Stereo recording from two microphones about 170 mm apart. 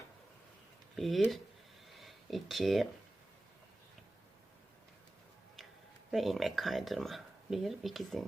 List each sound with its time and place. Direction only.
0.9 s speech: centre (ahead or behind)
6.1 s speech: centre (ahead or behind)